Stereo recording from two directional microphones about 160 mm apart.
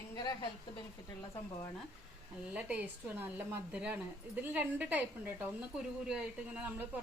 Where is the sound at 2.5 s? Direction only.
10° right (ahead or behind).